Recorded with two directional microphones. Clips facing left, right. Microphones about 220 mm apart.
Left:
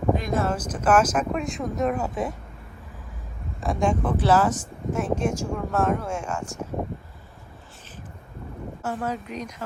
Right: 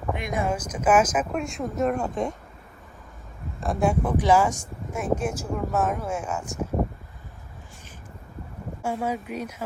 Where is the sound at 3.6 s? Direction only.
5° right (ahead or behind).